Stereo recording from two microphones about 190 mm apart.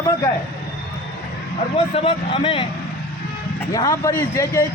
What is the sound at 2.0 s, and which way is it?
Speech, 30° left (ahead or behind).